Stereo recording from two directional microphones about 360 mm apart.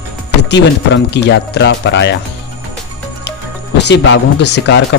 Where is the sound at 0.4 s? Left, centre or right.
Left.